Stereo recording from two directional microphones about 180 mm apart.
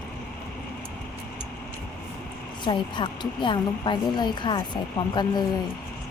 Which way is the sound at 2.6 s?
25° left (ahead or behind).